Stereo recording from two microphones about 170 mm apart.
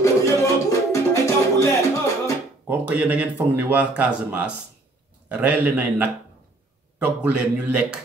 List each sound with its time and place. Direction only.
0.0 s music: 20° left (ahead or behind)
2.6 s speech: 10° right (ahead or behind)